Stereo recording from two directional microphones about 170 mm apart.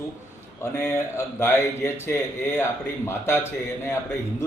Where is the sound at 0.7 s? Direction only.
15° left (ahead or behind).